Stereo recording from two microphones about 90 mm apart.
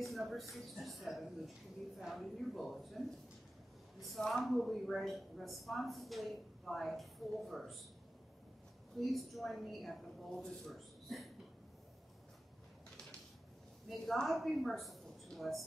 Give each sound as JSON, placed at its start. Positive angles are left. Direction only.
{"t": 0.0, "sound": "a woman's voice", "side_deg": 0}
{"t": 4.0, "sound": "a woman's voice", "side_deg": 0}
{"t": 8.9, "sound": "a woman's voice", "side_deg": 0}
{"t": 13.8, "sound": "a woman's voice", "side_deg": 5}